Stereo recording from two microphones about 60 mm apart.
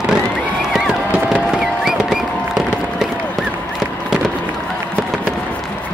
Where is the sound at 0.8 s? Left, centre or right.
Centre.